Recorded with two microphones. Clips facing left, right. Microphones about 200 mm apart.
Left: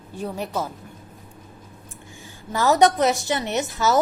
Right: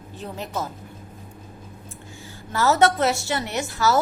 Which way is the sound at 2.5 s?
15° left (ahead or behind).